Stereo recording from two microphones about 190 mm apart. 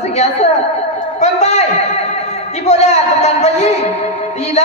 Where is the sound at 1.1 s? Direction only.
35° left (ahead or behind).